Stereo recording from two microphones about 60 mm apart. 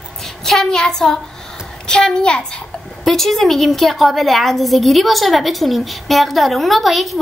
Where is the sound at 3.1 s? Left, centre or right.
Centre.